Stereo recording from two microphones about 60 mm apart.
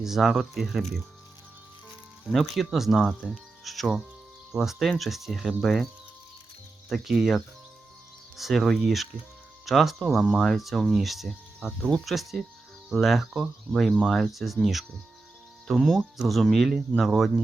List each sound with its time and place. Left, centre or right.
0.0 s speech: centre
2.2 s speech: centre
5.6 s speech: centre